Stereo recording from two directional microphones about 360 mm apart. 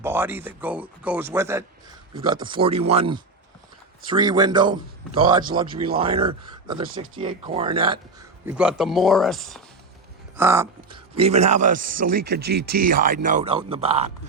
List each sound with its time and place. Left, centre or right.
0.0 s speech: centre